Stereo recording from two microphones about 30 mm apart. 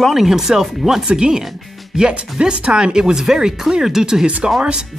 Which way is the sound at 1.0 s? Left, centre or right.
Right.